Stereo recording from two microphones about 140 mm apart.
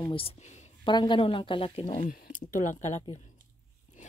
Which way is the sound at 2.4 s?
65° left (ahead or behind).